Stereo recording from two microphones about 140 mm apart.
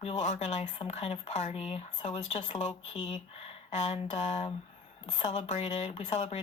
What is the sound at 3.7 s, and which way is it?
Speech, 55° left (ahead or behind).